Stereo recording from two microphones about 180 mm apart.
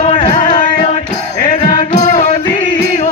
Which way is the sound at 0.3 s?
45° left (ahead or behind).